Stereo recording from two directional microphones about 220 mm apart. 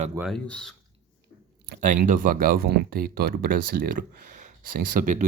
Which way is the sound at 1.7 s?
40° right (ahead or behind).